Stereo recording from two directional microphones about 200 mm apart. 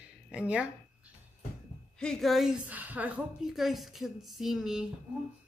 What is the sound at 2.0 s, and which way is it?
A woman's voice, centre (ahead or behind).